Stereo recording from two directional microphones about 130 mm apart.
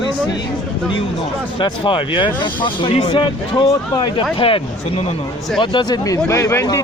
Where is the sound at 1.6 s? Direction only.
40° left (ahead or behind).